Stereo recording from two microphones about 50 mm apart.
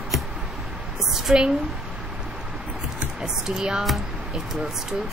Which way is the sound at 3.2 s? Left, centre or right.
Centre.